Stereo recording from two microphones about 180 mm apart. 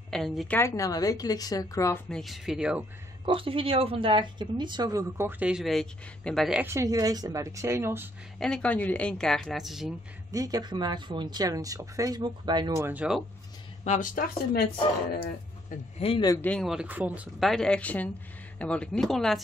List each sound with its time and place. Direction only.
0.1 s speech: centre (ahead or behind)
0.6 s a woman's voice: 15° left (ahead or behind)
2.0 s speech: centre (ahead or behind)
3.3 s speech: 30° right (ahead or behind); by 6.6 s centre (ahead or behind)
6.6 s speech: 15° right (ahead or behind)
8.4 s speech: 5° left (ahead or behind)
10.3 s speech: 20° right (ahead or behind)
13.8 s speech: 45° left (ahead or behind)
16.0 s a woman's voice: 25° left (ahead or behind)
16.3 s speech: 5° left (ahead or behind)